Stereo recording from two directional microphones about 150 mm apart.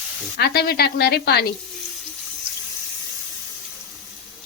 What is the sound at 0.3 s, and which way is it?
A woman's voice, 90° left.